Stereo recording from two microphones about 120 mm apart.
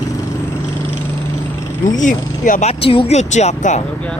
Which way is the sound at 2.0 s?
90° left.